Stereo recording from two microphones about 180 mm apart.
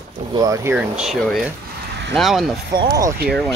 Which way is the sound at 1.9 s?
70° right (ahead or behind).